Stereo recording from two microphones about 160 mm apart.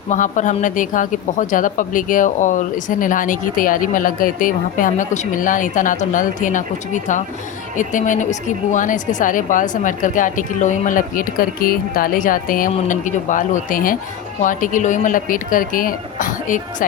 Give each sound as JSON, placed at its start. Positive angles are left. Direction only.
{"t": 0.1, "sound": "a woman's voice", "side_deg": 50}